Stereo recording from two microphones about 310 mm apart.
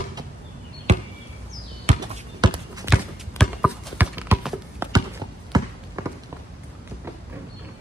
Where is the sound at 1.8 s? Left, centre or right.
Centre.